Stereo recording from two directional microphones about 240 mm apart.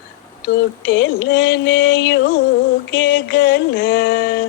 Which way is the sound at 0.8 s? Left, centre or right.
Left.